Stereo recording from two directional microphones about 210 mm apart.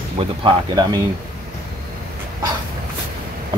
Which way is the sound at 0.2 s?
20° right (ahead or behind).